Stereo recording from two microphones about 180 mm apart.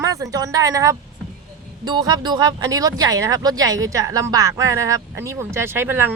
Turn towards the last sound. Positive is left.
turn(degrees=-10)  # may be behind; listen again after turning